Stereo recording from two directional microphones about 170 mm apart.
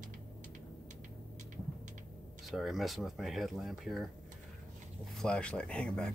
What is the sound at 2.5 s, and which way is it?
Speech, centre (ahead or behind).